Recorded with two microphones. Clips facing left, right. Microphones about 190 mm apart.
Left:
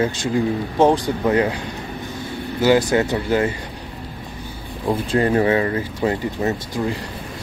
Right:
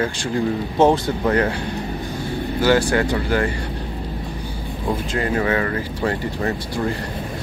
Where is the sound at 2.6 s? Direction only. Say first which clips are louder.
Left 2 dB; 20° left (ahead or behind).